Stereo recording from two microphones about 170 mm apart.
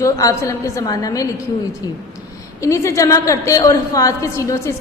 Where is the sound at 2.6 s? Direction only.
20° left (ahead or behind).